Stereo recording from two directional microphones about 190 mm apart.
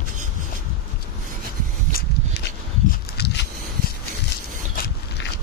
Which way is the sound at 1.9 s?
50° left (ahead or behind).